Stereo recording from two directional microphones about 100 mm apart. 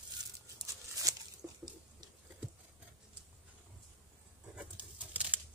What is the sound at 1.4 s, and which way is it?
Water, centre (ahead or behind).